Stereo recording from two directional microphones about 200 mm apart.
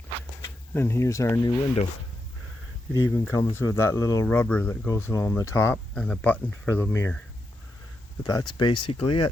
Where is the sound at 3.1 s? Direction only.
15° left (ahead or behind).